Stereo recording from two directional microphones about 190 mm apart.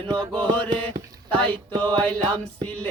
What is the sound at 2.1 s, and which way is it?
Music, 25° right (ahead or behind).